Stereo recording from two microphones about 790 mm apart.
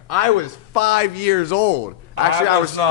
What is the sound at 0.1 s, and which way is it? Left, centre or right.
A man's voice, left.